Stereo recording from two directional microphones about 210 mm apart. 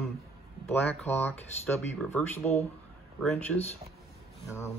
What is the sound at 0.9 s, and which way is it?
Speech, 10° left (ahead or behind).